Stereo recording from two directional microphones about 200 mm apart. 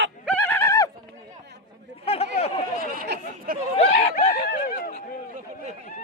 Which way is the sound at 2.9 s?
55° right (ahead or behind).